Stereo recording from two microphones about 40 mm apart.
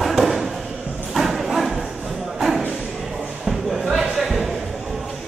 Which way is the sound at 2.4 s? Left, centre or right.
Centre.